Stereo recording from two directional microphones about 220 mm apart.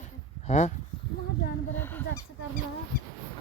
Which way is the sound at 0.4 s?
30° left (ahead or behind).